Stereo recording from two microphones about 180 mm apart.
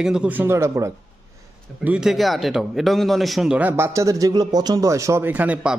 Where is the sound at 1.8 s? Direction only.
5° right (ahead or behind).